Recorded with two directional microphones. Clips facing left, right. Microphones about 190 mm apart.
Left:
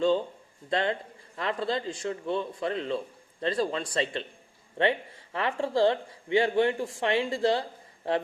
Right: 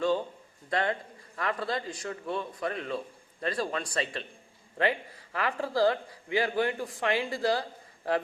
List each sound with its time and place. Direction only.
0.7 s a man's voice: 25° left (ahead or behind)